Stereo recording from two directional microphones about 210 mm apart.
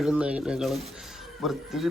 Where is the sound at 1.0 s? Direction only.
Centre (ahead or behind).